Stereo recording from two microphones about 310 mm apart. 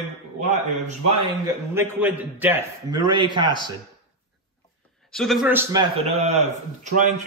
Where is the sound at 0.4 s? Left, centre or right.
Right.